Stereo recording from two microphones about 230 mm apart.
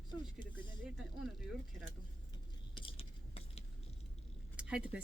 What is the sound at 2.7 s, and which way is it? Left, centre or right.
Biting, left.